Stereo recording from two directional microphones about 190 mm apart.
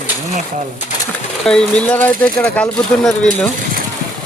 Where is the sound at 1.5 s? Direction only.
5° left (ahead or behind).